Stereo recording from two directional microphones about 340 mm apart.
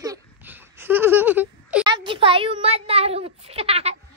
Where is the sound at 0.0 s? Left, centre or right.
Centre.